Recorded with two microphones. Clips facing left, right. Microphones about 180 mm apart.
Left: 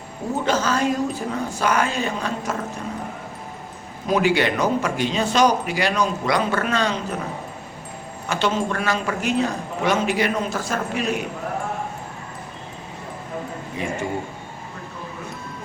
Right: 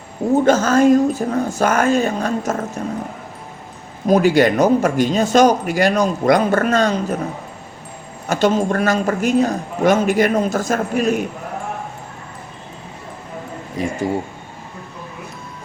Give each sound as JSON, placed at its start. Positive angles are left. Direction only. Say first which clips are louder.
{"t": 0.4, "sound": "speech", "louder": "right 7 dB", "side_deg": -45}
{"t": 4.0, "sound": "speech", "louder": "right 6 dB", "side_deg": -45}
{"t": 8.3, "sound": "speech", "louder": "right 6 dB", "side_deg": -45}
{"t": 13.8, "sound": "speech", "louder": "right 5 dB", "side_deg": -40}